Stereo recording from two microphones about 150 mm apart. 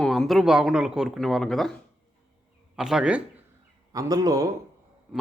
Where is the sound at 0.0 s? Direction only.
5° left (ahead or behind).